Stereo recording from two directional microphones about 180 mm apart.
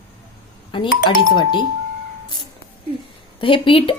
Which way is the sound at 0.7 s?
25° left (ahead or behind).